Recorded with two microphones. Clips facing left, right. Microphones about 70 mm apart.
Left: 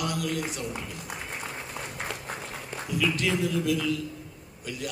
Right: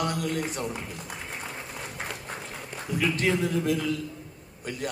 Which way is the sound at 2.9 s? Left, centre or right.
Right.